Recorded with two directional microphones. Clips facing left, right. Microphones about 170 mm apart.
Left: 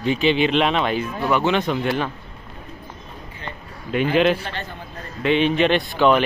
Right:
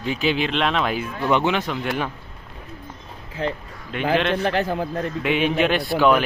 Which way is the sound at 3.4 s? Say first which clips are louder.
Right 11 dB; 90° right.